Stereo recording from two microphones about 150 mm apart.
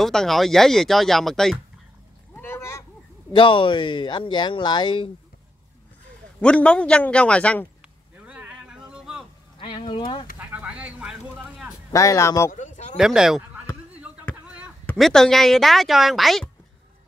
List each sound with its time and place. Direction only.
0.0 s speech: centre (ahead or behind)
2.3 s a sound: 15° left (ahead or behind)
3.3 s speech: 30° left (ahead or behind)
6.4 s a man's voice: 5° left (ahead or behind)
8.3 s vehicle: 10° right (ahead or behind)
9.6 s speech: 30° left (ahead or behind)
10.4 s a sound: 10° right (ahead or behind)
11.9 s speech: 20° left (ahead or behind)
12.5 s a sound: 55° left (ahead or behind)
12.9 s speech: 5° right (ahead or behind)
14.4 s a sound: 10° right (ahead or behind)
15.0 s speech: centre (ahead or behind)